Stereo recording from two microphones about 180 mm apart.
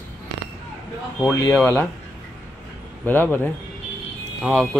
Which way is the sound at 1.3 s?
15° left (ahead or behind).